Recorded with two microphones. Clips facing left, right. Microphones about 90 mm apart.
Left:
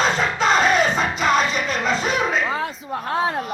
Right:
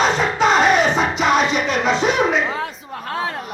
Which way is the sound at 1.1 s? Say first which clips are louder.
Right 2 dB; 75° right (ahead or behind).